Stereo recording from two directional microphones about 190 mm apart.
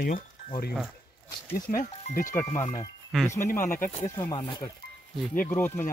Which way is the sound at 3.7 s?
45° left (ahead or behind).